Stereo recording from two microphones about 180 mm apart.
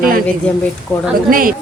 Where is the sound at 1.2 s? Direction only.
50° right (ahead or behind).